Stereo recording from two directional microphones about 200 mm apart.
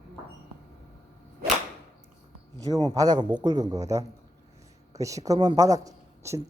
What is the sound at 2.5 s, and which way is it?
A man's voice, 20° right (ahead or behind).